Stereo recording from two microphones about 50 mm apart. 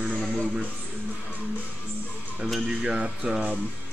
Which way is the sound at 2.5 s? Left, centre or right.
Centre.